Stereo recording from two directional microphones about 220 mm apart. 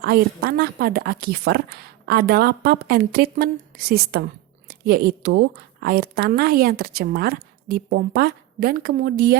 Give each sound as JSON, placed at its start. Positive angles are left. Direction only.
{"t": 0.0, "sound": "a woman's voice", "side_deg": -45}